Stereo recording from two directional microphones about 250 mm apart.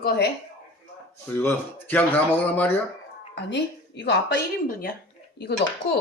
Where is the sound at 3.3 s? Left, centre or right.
Left.